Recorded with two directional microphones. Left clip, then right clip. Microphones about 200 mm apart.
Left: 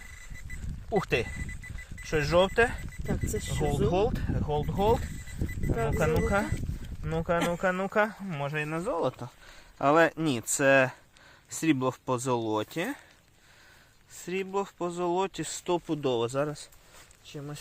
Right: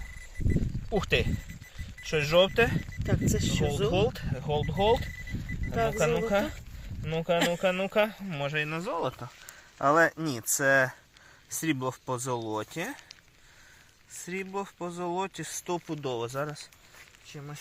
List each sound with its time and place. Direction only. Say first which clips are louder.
0.9 s speech: even; 20° left (ahead or behind)
3.1 s speech: right 4 dB; 5° left (ahead or behind)
3.9 s speech: even; 15° left (ahead or behind)
6.1 s speech: right 1 dB; 20° left (ahead or behind)
7.3 s speech: right 2 dB; 10° left (ahead or behind)
7.6 s speech: right 1 dB; 20° left (ahead or behind); by 13.0 s 35° left (ahead or behind)
14.3 s speech: left 4 dB; 35° left (ahead or behind); by 17.6 s 55° left (ahead or behind)